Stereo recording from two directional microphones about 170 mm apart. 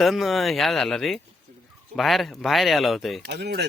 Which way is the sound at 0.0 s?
Centre (ahead or behind).